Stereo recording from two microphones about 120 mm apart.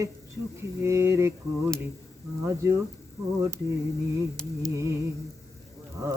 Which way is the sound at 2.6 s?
30° right (ahead or behind).